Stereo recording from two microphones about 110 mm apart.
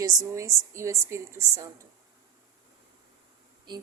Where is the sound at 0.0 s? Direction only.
35° right (ahead or behind).